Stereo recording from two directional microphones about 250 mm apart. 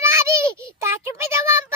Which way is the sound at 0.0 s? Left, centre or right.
Centre.